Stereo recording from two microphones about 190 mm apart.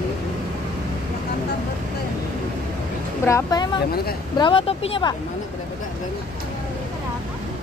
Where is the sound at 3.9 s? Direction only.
55° left (ahead or behind).